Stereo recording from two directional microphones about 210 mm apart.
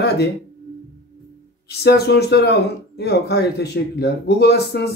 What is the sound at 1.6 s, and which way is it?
Speech, 50° left (ahead or behind).